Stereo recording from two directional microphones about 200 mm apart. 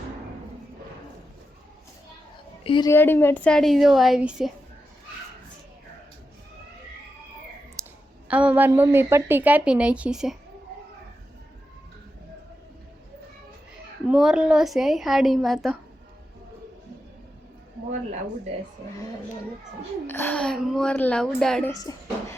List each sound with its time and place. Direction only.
2.6 s a woman's voice: 25° left (ahead or behind)
2.9 s speech: 10° left (ahead or behind)
7.8 s clicking: 15° right (ahead or behind)
8.3 s a woman's voice: 5° right (ahead or behind)
14.1 s speech: 5° right (ahead or behind)
20.1 s speech: 10° left (ahead or behind)
21.7 s speech: 20° left (ahead or behind)